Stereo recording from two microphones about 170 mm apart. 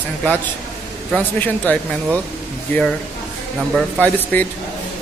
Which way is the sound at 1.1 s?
10° left (ahead or behind).